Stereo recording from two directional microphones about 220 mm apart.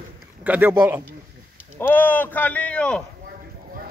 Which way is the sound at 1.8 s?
10° left (ahead or behind).